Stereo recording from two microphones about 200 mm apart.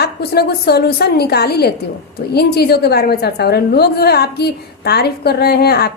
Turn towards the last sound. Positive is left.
turn(degrees=50)  # may be behind; listen again after turning